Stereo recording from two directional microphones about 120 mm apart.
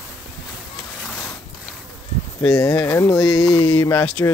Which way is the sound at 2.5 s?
25° left (ahead or behind).